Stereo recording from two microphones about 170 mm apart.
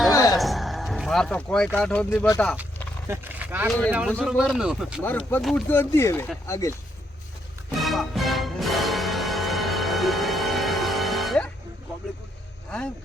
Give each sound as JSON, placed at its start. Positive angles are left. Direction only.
{"t": 0.1, "sound": "music", "side_deg": 20}
{"t": 0.3, "sound": "music", "side_deg": 0}
{"t": 3.1, "sound": "speech", "side_deg": -10}
{"t": 3.7, "sound": "speech", "side_deg": 5}
{"t": 5.0, "sound": "speech", "side_deg": 10}
{"t": 7.8, "sound": "music", "side_deg": 0}